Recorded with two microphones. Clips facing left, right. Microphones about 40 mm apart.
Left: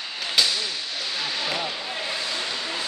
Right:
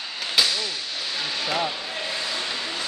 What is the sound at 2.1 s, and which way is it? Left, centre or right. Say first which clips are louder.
Vehicle: right 1 dB; centre.